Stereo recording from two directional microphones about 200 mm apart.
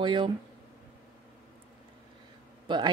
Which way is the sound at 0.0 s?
25° right (ahead or behind).